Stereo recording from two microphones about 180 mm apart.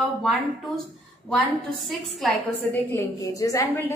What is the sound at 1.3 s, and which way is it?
A woman's voice, centre (ahead or behind).